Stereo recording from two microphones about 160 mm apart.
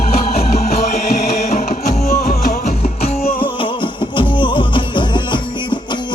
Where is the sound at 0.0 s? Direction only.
65° left (ahead or behind).